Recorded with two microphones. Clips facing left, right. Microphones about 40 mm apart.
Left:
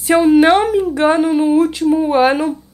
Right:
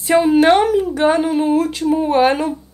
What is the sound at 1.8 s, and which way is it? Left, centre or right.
Speech, centre.